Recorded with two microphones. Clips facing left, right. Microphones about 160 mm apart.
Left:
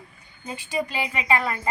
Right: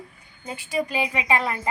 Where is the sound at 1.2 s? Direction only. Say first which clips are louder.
Left 3 dB; 15° right (ahead or behind).